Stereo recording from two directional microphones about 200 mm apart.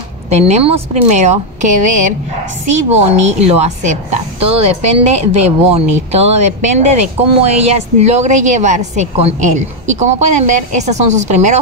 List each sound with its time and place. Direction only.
0.3 s a woman's voice: 30° right (ahead or behind)